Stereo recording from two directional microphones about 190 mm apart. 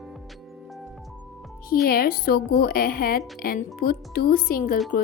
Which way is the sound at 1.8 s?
50° left (ahead or behind).